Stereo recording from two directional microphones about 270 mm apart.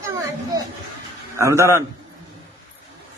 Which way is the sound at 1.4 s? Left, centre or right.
Centre.